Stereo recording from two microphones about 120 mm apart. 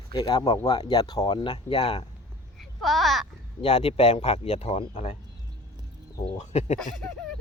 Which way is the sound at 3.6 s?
60° left (ahead or behind).